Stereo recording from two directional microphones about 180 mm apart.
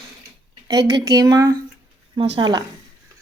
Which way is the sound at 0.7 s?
20° right (ahead or behind).